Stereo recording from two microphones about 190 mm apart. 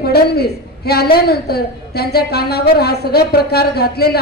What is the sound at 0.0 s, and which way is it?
A woman's voice, 55° left (ahead or behind).